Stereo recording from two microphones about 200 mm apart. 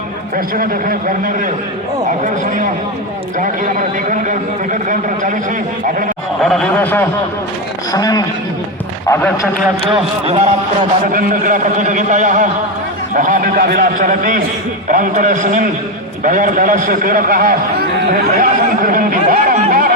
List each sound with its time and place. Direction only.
0.3 s a man's voice: 45° right (ahead or behind)
6.4 s a man's voice: centre (ahead or behind)
9.9 s a man's voice: 30° right (ahead or behind)
11.1 s a man's voice: 45° right (ahead or behind)